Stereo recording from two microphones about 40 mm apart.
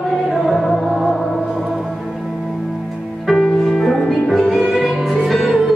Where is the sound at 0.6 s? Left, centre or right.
Centre.